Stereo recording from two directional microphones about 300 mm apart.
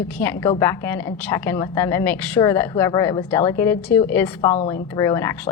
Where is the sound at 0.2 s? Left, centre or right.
Centre.